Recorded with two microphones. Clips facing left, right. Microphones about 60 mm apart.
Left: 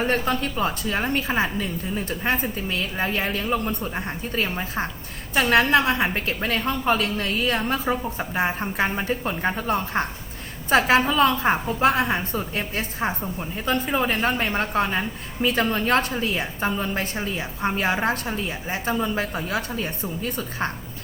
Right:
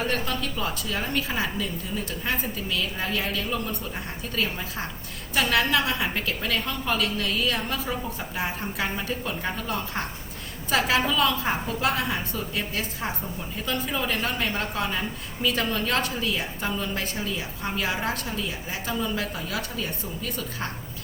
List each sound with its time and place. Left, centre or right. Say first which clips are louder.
0.0 s a woman's voice: left 5 dB; left